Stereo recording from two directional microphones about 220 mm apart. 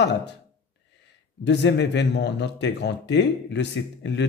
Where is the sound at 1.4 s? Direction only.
50° left (ahead or behind).